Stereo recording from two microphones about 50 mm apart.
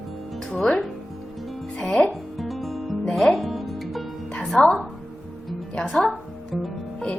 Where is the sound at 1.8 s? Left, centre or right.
Centre.